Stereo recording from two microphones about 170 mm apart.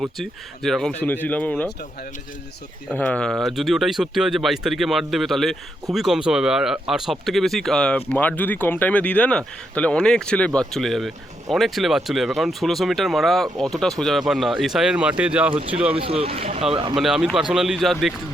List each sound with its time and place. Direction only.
0.0 s speech: centre (ahead or behind)
2.9 s speech: 5° left (ahead or behind)
15.5 s speech: 35° right (ahead or behind)
16.9 s speech: 5° right (ahead or behind)